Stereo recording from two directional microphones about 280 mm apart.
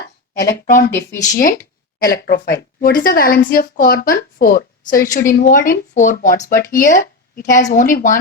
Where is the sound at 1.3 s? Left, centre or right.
Left.